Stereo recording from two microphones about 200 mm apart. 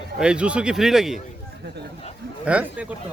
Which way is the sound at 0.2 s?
5° right (ahead or behind).